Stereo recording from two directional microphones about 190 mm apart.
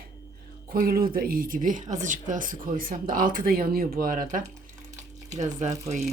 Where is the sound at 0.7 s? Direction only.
50° right (ahead or behind).